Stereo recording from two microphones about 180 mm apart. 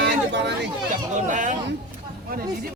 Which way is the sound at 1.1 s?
45° right (ahead or behind).